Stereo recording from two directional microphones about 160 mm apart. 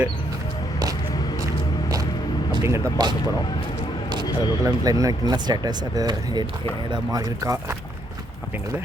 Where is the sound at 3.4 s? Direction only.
30° left (ahead or behind).